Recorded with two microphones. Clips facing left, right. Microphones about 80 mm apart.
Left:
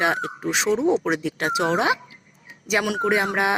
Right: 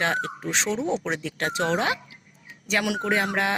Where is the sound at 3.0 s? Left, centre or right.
Centre.